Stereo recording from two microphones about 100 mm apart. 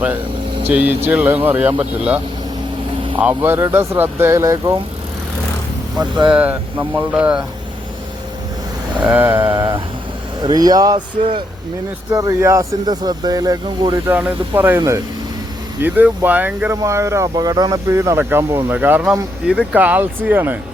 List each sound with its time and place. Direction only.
0.7 s speech: 15° right (ahead or behind); by 4.8 s 30° right (ahead or behind)
6.3 s speech: 15° right (ahead or behind)
9.0 s vehicle: 20° right (ahead or behind)
9.4 s speech: 45° right (ahead or behind)
11.2 s speech: 75° right (ahead or behind)
12.1 s speech: 35° right (ahead or behind)
12.8 s speech: 45° right (ahead or behind)
14.1 s speech: 10° right (ahead or behind)
14.5 s speech: 25° right (ahead or behind)
15.8 s speech: 20° right (ahead or behind)
16.8 s speech: 30° right (ahead or behind)